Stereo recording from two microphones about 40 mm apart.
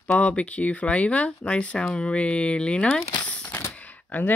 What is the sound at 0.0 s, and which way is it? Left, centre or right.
Speech, left.